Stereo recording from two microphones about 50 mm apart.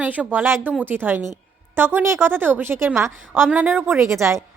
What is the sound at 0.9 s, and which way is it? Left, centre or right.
A woman's voice, right.